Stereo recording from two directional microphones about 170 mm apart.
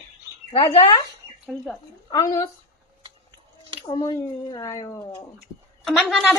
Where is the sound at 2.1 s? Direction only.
20° left (ahead or behind).